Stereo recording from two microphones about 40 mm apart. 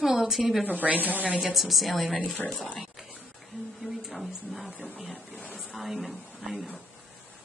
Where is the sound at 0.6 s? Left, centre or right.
Right.